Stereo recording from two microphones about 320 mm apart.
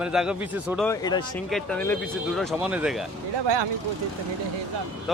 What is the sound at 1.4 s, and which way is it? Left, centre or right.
Speech, centre.